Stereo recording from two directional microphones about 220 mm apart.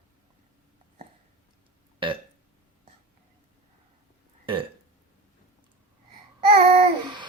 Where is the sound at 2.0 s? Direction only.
25° right (ahead or behind).